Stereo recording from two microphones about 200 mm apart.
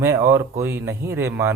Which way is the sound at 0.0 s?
15° right (ahead or behind).